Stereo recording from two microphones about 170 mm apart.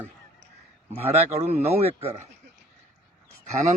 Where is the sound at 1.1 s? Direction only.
35° right (ahead or behind).